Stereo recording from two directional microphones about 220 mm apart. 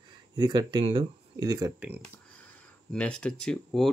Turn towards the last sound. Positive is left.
turn(degrees=5)  # may be behind; listen again after turning